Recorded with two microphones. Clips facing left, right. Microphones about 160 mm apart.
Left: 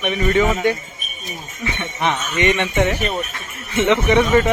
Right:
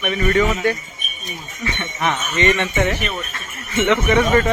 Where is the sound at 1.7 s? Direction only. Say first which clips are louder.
Left 1 dB; 15° left (ahead or behind).